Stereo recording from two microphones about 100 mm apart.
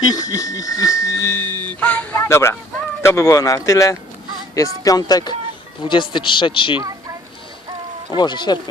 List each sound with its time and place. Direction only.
0.0 s speech: 40° left (ahead or behind); by 1.7 s 25° left (ahead or behind)
1.8 s speech: 15° left (ahead or behind)
2.1 s speech: 25° left (ahead or behind)
5.8 s a man's voice: 55° left (ahead or behind)
8.1 s speech: 50° left (ahead or behind)